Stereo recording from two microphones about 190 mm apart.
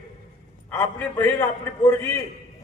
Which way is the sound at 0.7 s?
10° left (ahead or behind).